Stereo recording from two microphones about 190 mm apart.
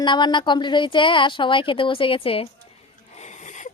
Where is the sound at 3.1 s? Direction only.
40° left (ahead or behind).